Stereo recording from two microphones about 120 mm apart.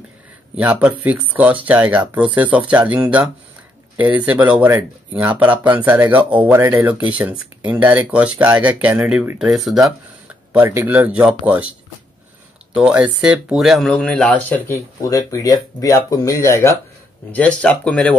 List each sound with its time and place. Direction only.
0.6 s speech: 10° right (ahead or behind)
9.7 s speech: centre (ahead or behind)
10.5 s speech: 20° right (ahead or behind)
12.7 s speech: 10° right (ahead or behind); by 14.8 s 15° left (ahead or behind)
15.0 s speech: 30° left (ahead or behind)
17.3 s speech: 10° left (ahead or behind)